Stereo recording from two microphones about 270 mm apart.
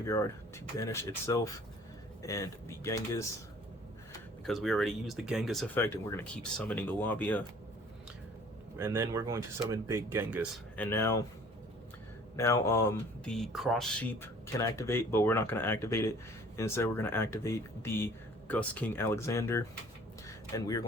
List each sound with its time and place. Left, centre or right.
0.0 s speech: centre
4.4 s speech: centre
8.8 s speech: centre
10.8 s speech: centre
12.4 s speech: centre
20.2 s a sound: centre